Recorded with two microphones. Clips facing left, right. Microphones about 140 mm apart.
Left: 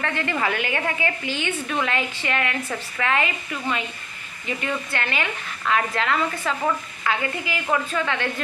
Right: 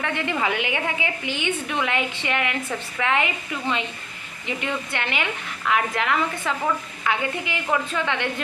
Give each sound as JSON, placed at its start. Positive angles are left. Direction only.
{"t": 0.0, "sound": "a woman's voice", "side_deg": -15}
{"t": 4.9, "sound": "a woman's voice", "side_deg": -20}